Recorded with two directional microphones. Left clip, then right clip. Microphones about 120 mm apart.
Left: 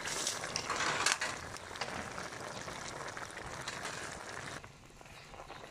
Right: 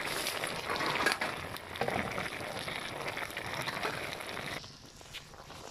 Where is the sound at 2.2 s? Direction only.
5° right (ahead or behind).